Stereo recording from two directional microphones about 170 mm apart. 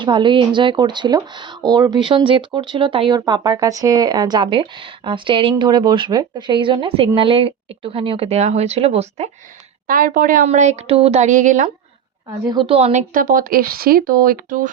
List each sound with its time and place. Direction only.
0.0 s speech: 30° right (ahead or behind)
9.8 s a woman's voice: 55° right (ahead or behind)
12.5 s a woman's voice: 30° right (ahead or behind); by 14.7 s 55° right (ahead or behind)